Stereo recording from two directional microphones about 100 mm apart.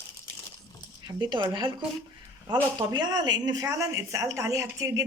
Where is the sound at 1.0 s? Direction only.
50° right (ahead or behind).